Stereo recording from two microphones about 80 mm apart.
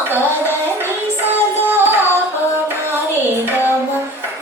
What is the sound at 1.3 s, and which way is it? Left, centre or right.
Music, right.